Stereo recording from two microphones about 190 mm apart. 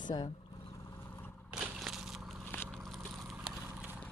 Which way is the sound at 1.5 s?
Centre (ahead or behind).